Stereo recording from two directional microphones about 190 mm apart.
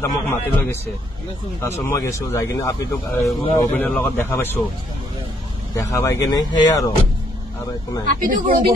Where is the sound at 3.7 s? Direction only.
5° left (ahead or behind).